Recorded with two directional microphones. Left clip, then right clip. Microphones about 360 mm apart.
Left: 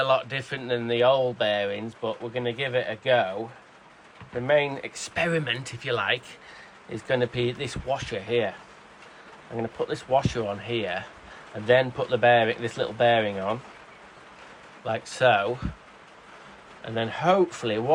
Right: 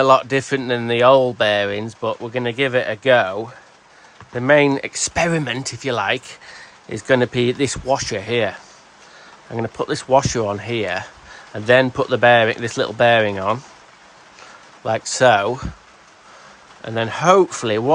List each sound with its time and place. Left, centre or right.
0.0 s speech: centre
4.4 s speech: right
9.7 s speech: right
14.8 s speech: centre
16.8 s speech: right